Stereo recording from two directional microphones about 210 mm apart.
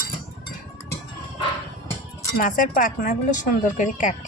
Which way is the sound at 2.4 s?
40° left (ahead or behind).